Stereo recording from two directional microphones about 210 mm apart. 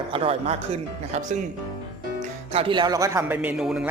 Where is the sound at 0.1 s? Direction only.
25° right (ahead or behind).